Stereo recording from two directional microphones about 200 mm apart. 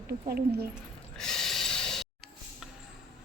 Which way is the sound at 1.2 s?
Centre (ahead or behind).